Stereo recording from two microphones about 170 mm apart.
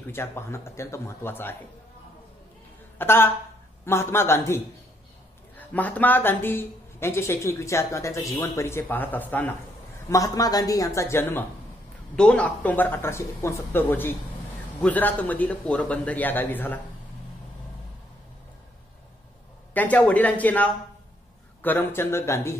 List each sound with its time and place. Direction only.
0.0 s speech: 15° left (ahead or behind)
3.0 s speech: 15° left (ahead or behind)
5.6 s a woman's voice: 10° left (ahead or behind)
19.7 s speech: 10° left (ahead or behind)